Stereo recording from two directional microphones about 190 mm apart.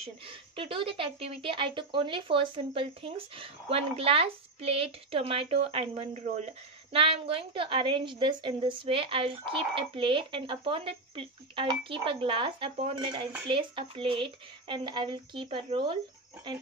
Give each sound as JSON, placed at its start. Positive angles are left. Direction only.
{"t": 0.0, "sound": "speech", "side_deg": -30}